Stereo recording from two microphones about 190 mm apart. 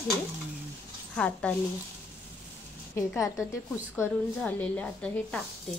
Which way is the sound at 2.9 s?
15° left (ahead or behind).